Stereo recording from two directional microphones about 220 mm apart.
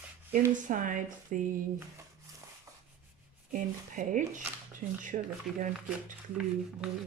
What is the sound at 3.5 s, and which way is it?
Speech, 35° right (ahead or behind).